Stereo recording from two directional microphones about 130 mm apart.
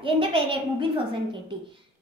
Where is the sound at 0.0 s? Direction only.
45° right (ahead or behind).